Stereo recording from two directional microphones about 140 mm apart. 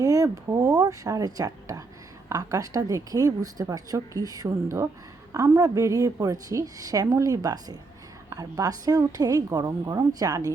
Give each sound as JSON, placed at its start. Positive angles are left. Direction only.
{"t": 0.0, "sound": "a woman's voice", "side_deg": -25}